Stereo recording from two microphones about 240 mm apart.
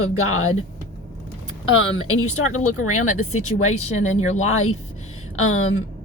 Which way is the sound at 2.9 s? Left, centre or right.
Left.